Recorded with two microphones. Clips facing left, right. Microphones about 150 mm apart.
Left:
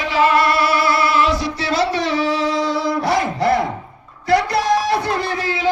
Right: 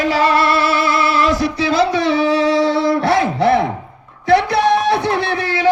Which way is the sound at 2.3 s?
65° right (ahead or behind).